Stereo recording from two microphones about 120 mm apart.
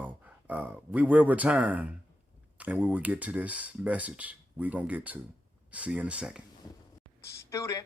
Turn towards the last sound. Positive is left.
turn(degrees=25)  # may be behind; listen again after turning